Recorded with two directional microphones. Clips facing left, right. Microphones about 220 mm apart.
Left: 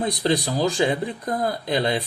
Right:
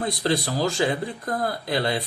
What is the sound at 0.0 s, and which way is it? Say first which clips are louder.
Speech: left 2 dB; 20° left (ahead or behind).